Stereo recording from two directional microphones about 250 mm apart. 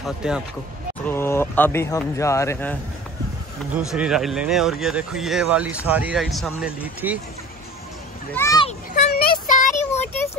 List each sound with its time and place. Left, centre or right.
0.0 s speech: centre
1.0 s speech: centre
3.7 s speech: centre
8.3 s speech: centre
8.6 s a sound: left
9.1 s child singing: left